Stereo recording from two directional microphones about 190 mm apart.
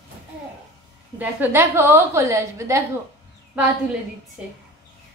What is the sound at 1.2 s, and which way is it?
A woman's voice, 10° right (ahead or behind).